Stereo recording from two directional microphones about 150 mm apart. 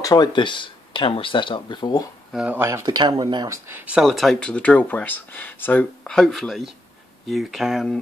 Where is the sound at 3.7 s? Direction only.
15° right (ahead or behind).